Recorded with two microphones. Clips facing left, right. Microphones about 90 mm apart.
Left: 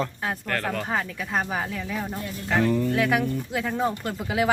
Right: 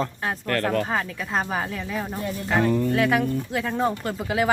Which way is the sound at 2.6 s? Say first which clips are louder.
Right 1 dB; 30° right (ahead or behind).